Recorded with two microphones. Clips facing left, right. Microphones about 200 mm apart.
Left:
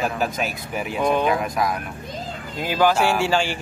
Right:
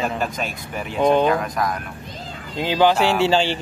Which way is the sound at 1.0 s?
30° right (ahead or behind).